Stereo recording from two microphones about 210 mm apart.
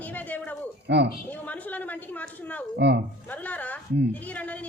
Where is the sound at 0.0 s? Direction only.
10° left (ahead or behind).